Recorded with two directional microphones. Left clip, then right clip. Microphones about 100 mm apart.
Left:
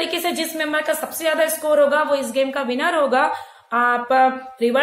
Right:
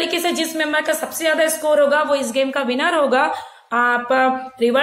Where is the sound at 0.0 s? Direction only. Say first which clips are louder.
Right 2 dB; 25° right (ahead or behind).